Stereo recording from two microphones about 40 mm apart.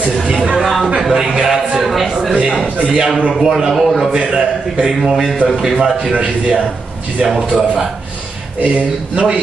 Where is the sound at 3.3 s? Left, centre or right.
Centre.